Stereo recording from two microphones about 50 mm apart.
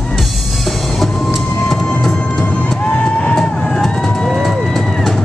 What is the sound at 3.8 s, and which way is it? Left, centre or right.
Vehicle, centre.